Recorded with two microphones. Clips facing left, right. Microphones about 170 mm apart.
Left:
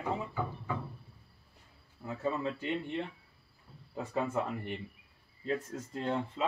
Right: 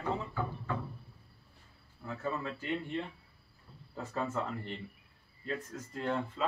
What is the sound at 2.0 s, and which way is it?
Speech, 20° left (ahead or behind).